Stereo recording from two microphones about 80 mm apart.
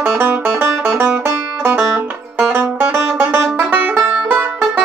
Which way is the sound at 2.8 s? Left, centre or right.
Centre.